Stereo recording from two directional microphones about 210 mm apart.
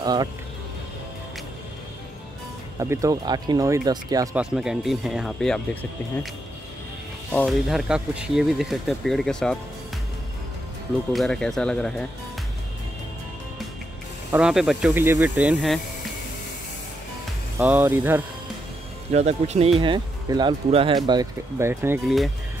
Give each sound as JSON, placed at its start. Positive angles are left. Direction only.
{"t": 0.0, "sound": "speech", "side_deg": -20}
{"t": 2.8, "sound": "speech", "side_deg": -15}
{"t": 4.4, "sound": "speech", "side_deg": 0}
{"t": 7.3, "sound": "speech", "side_deg": 0}
{"t": 11.1, "sound": "speech", "side_deg": 5}
{"t": 14.3, "sound": "speech", "side_deg": -5}
{"t": 17.6, "sound": "speech", "side_deg": -10}
{"t": 19.1, "sound": "speech", "side_deg": -30}
{"t": 22.0, "sound": "speech", "side_deg": 0}